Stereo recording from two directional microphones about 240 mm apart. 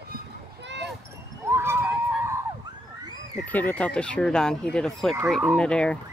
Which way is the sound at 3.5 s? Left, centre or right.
Centre.